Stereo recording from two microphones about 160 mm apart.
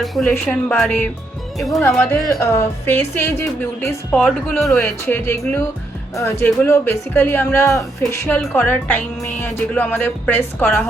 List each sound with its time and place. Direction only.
0.0 s speech: centre (ahead or behind)
2.2 s speech: 20° left (ahead or behind)